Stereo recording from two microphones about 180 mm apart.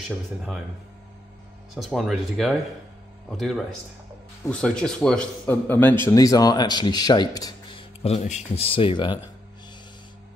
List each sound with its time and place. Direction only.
1.8 s speech: centre (ahead or behind); by 7.8 s 25° left (ahead or behind)
8.0 s speech: 35° left (ahead or behind)